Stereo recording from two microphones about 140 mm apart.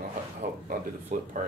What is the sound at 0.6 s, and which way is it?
Speech, 80° right.